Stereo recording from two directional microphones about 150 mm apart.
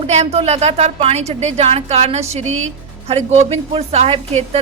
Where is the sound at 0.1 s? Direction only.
45° right (ahead or behind).